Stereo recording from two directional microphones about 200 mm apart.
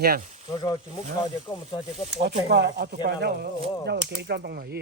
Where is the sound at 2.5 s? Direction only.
60° right (ahead or behind).